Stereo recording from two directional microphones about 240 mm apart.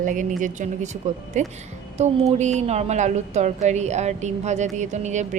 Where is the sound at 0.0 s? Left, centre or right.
Right.